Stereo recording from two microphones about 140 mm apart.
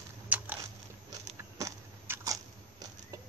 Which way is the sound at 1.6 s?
25° right (ahead or behind).